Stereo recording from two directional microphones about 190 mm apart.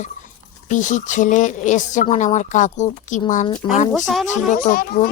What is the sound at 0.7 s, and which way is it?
Speech, 40° left (ahead or behind).